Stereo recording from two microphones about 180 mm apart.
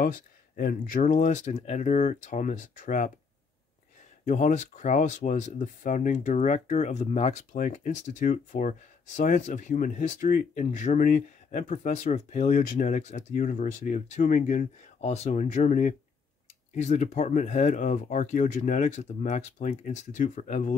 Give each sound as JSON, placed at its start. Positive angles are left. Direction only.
{"t": 0.0, "sound": "speech", "side_deg": 50}
{"t": 4.3, "sound": "speech", "side_deg": 45}